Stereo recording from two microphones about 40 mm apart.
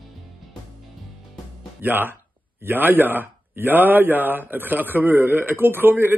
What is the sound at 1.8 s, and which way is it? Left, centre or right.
A man's voice, right.